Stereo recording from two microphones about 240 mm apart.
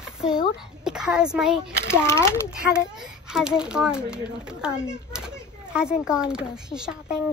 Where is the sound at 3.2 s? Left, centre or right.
Centre.